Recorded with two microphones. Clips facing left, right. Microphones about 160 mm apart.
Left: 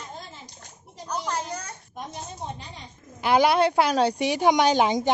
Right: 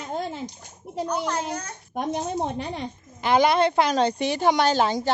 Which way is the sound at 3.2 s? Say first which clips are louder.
Even; 5° left (ahead or behind).